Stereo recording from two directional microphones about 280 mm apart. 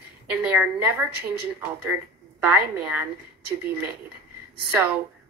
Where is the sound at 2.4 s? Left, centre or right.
Centre.